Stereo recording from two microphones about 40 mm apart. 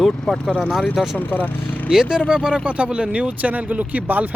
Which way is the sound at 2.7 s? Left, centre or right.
Right.